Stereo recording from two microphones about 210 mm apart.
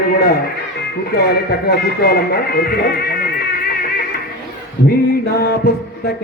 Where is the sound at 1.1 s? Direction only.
50° left (ahead or behind).